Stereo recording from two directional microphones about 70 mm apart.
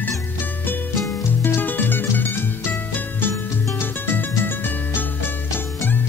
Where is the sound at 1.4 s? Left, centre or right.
Left.